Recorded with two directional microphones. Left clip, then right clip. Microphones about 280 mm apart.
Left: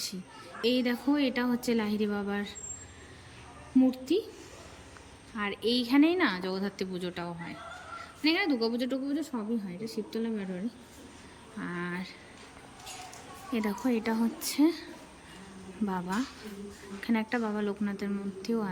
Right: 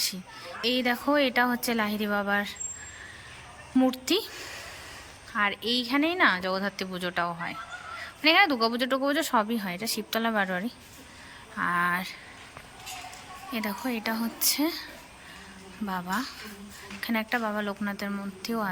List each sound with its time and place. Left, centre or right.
0.0 s speech: centre
3.8 s speech: centre
5.4 s speech: centre
9.3 s speech: right
9.7 s speech: centre
13.5 s speech: centre
15.9 s speech: centre